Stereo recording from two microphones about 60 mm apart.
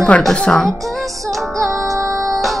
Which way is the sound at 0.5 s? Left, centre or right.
Centre.